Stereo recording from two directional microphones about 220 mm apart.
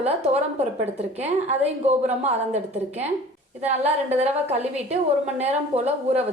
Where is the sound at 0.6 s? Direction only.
30° right (ahead or behind).